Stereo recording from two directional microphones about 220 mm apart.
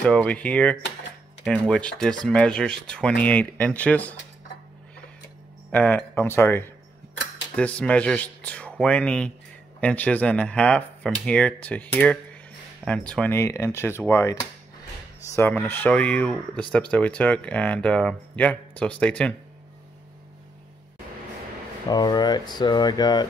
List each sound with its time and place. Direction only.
0.0 s speech: 5° left (ahead or behind)
5.7 s speech: 5° left (ahead or behind)
15.3 s speech: 10° left (ahead or behind)
21.8 s speech: 20° left (ahead or behind)